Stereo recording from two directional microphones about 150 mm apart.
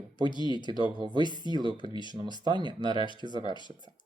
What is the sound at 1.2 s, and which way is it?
Speech, 30° left (ahead or behind).